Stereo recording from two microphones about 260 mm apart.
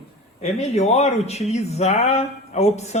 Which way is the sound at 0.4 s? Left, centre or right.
Left.